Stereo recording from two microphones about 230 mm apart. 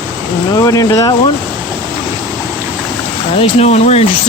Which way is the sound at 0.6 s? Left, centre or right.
Centre.